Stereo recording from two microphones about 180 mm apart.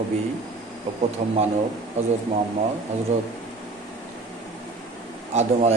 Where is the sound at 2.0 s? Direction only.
35° right (ahead or behind).